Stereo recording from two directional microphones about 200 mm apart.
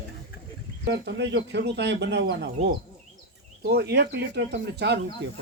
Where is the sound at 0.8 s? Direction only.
60° right (ahead or behind).